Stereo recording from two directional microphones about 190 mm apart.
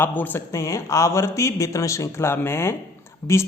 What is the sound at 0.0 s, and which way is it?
A man's voice, 10° left (ahead or behind).